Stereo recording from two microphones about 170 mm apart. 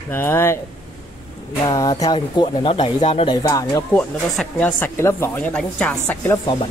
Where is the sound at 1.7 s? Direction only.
20° left (ahead or behind).